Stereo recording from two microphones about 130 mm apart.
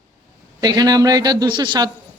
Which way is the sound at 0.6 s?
30° right (ahead or behind).